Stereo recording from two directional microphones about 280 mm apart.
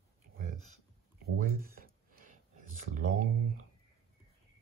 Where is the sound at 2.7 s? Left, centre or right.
Right.